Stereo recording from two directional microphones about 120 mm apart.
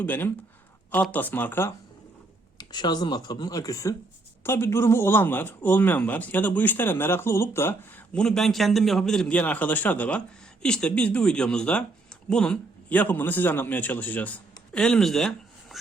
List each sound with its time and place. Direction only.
0.0 s a man's voice: 15° left (ahead or behind)
2.6 s a man's voice: 35° left (ahead or behind); by 8.0 s 20° left (ahead or behind)
8.1 s a man's voice: 5° left (ahead or behind)